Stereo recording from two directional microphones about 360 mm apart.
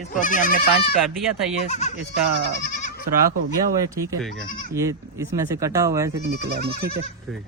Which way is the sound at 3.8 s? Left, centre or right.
Centre.